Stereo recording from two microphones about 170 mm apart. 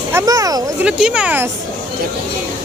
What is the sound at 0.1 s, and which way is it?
Speech, 20° right (ahead or behind).